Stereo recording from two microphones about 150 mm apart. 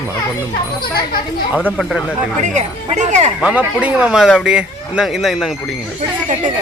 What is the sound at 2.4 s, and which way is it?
Speech, 50° right (ahead or behind).